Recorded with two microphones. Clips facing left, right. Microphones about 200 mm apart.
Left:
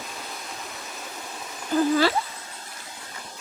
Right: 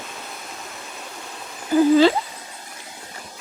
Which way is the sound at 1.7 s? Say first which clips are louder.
Right 6 dB; 10° right (ahead or behind).